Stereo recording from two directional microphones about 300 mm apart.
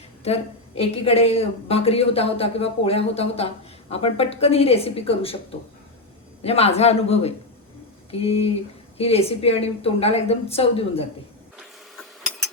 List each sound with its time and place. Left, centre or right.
0.3 s speech: centre
6.4 s speech: centre